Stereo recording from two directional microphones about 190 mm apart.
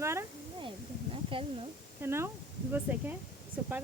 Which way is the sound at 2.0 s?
15° right (ahead or behind).